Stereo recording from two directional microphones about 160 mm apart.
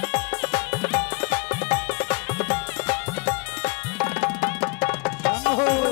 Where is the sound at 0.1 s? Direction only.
10° left (ahead or behind).